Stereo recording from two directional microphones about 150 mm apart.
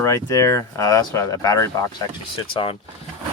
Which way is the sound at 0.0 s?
20° left (ahead or behind).